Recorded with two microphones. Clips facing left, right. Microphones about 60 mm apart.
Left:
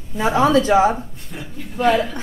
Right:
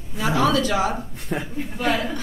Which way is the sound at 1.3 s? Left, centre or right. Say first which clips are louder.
Right 7 dB; right.